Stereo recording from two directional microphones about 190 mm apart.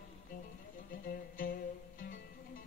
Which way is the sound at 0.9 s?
50° left (ahead or behind).